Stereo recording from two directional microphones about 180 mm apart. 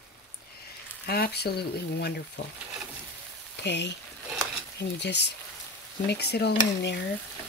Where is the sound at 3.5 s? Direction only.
70° left (ahead or behind).